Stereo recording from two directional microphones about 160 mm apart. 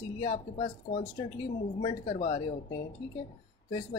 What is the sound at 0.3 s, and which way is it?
Speech, 50° left (ahead or behind).